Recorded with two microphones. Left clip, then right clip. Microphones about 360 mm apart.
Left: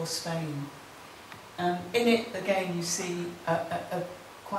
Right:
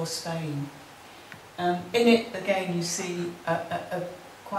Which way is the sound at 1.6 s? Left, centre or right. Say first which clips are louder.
Right 3 dB; centre.